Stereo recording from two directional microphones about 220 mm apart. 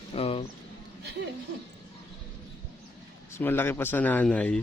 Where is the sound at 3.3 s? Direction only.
10° left (ahead or behind).